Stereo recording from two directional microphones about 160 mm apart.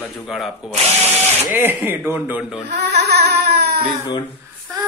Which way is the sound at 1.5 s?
15° right (ahead or behind).